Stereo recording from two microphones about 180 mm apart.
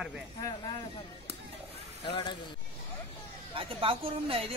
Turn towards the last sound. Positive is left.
turn(degrees=-30)  # may be behind; listen again after turning